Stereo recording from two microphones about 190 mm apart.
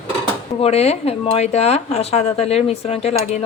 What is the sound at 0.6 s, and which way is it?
Speech, 35° left (ahead or behind).